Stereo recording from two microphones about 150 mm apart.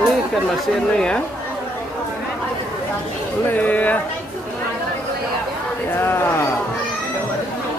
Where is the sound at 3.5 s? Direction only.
10° left (ahead or behind).